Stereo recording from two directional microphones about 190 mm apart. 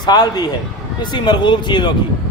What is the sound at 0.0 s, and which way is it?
Speech, 20° left (ahead or behind).